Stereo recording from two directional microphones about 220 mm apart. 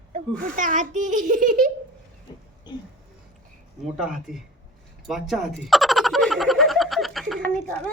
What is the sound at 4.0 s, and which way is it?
Speech, centre (ahead or behind).